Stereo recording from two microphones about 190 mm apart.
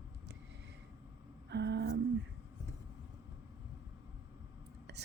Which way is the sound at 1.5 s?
65° right (ahead or behind).